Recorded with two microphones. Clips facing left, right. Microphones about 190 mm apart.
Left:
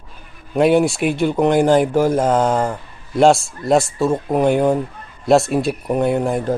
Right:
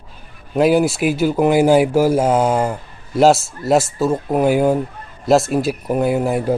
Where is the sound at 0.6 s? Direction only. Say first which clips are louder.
Even; centre (ahead or behind).